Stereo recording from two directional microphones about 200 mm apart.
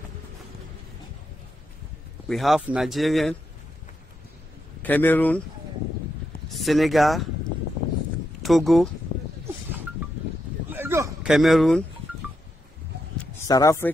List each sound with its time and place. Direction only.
2.2 s speech: centre (ahead or behind)
4.8 s speech: 10° left (ahead or behind)
6.5 s speech: centre (ahead or behind)
8.4 s speech: centre (ahead or behind)
10.7 s a sound: 10° right (ahead or behind)
11.3 s speech: centre (ahead or behind)
13.5 s speech: 15° left (ahead or behind)